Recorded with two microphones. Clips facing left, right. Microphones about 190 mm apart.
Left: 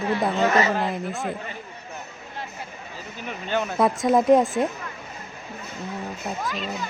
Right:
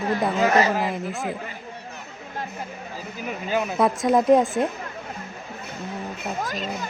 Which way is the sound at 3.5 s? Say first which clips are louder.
Even; 5° right (ahead or behind).